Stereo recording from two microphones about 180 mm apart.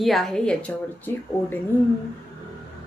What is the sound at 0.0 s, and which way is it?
Speech, centre (ahead or behind).